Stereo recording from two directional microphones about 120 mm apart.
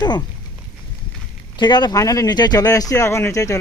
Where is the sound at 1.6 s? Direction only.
35° left (ahead or behind).